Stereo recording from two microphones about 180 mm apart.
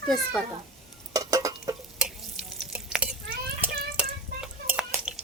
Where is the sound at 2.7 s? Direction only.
5° right (ahead or behind).